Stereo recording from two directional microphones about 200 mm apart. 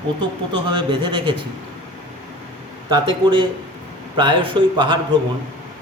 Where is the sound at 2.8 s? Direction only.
25° right (ahead or behind).